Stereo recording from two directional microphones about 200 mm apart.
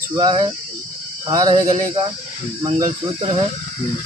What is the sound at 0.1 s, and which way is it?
Speech, 20° right (ahead or behind).